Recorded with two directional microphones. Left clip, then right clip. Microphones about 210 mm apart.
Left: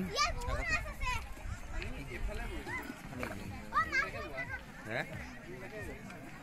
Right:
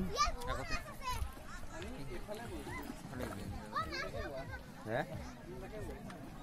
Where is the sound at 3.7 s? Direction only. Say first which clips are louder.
Left 8 dB; 25° left (ahead or behind).